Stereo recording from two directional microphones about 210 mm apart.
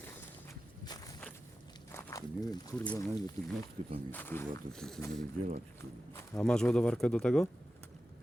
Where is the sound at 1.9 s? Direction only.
15° left (ahead or behind).